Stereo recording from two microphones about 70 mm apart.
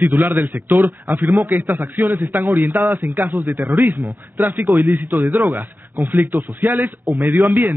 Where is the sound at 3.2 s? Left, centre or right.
Right.